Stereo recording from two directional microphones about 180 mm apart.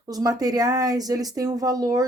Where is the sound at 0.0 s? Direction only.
20° right (ahead or behind).